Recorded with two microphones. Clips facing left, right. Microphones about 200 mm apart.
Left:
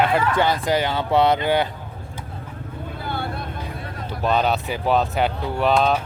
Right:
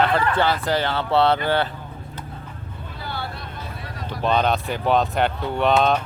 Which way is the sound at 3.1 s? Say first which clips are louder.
Left 3 dB; 50° left (ahead or behind).